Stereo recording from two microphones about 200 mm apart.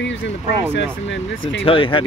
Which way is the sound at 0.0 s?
65° left (ahead or behind).